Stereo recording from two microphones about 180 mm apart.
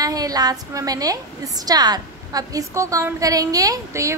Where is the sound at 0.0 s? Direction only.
20° right (ahead or behind).